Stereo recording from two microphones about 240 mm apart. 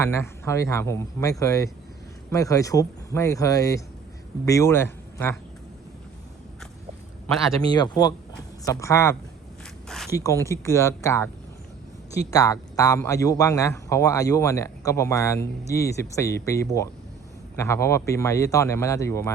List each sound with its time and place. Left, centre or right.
0.0 s a man's voice: centre
7.7 s a man's voice: centre
12.3 s a man's voice: centre